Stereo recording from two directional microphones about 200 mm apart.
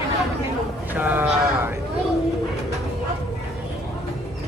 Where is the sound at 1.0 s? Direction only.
10° right (ahead or behind).